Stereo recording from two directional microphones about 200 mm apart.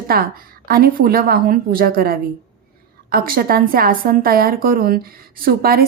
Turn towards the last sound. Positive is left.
turn(degrees=-50)  # may be behind; listen again after turning